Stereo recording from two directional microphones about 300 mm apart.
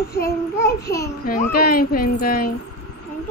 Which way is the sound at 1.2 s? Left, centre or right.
Left.